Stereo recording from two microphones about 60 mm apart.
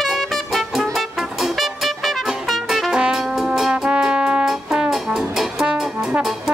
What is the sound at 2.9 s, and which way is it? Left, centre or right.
Brass instrument, centre.